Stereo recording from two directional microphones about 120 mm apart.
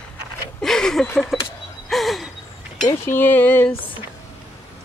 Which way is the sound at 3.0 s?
15° left (ahead or behind).